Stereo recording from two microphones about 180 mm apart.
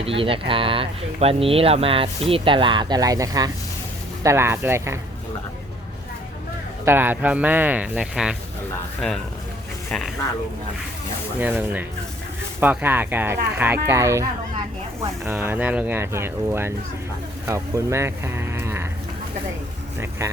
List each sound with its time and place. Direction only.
0.0 s speech: 30° right (ahead or behind); by 4.9 s 15° right (ahead or behind)
6.8 s speech: 10° right (ahead or behind)
11.3 s speech: 10° right (ahead or behind)
20.0 s speech: 15° right (ahead or behind)